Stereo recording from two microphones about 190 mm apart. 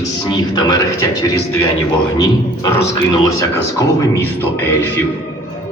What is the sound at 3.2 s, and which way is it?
Speech, 15° left (ahead or behind).